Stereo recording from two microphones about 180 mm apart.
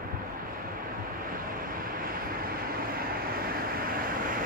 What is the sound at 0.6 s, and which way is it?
Vehicle, 50° right (ahead or behind).